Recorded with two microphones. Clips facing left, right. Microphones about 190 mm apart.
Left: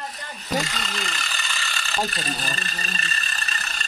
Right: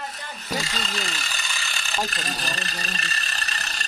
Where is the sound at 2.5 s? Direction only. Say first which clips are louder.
Right 1 dB; 70° right (ahead or behind).